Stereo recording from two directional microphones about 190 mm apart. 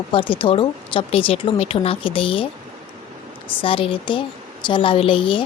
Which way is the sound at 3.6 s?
30° left (ahead or behind).